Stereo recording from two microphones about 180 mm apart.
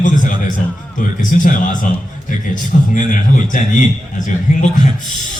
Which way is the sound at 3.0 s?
45° left (ahead or behind).